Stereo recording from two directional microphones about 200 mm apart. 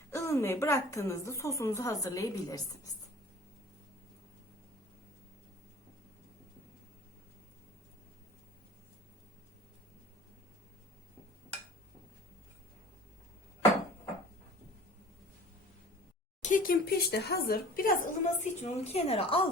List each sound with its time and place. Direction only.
0.1 s a woman's voice: 15° left (ahead or behind)
16.4 s a woman's voice: 40° left (ahead or behind)